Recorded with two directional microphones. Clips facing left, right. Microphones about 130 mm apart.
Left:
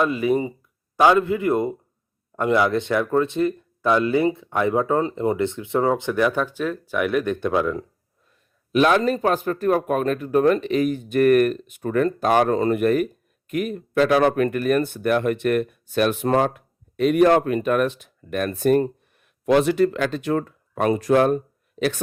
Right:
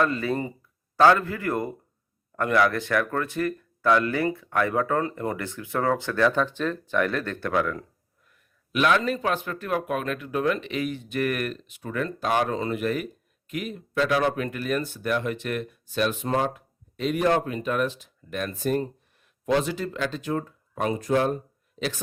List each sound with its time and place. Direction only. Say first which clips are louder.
0.0 s speech: left 4 dB; 15° left (ahead or behind)
8.3 s speech: left 9 dB; 35° left (ahead or behind); by 22.0 s 60° left (ahead or behind)